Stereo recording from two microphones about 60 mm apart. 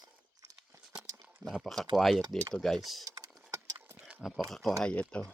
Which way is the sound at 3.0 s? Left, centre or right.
Right.